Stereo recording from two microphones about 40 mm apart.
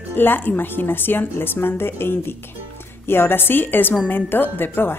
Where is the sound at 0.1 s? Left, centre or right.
Left.